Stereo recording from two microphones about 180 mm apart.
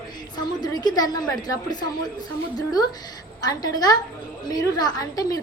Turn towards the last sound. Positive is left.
turn(degrees=20)  # may be behind; listen again after turning